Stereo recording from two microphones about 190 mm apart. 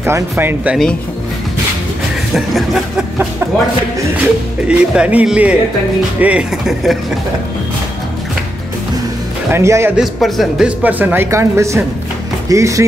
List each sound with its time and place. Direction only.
0.0 s speech: 10° right (ahead or behind)
2.3 s a sound: centre (ahead or behind)
4.6 s speech: 5° right (ahead or behind)
9.5 s speech: 15° right (ahead or behind)
9.9 s speech: centre (ahead or behind); by 12.8 s 15° right (ahead or behind)